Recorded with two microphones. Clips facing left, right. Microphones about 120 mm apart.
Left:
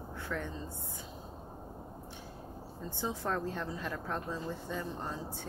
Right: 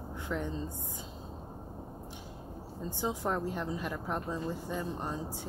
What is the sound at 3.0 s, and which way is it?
A woman's voice, 15° right (ahead or behind).